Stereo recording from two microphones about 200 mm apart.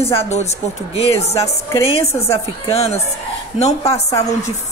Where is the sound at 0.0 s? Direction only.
30° left (ahead or behind).